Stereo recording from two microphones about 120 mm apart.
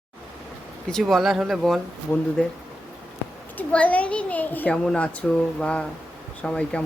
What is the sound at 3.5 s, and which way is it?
A child's voice, 10° left (ahead or behind).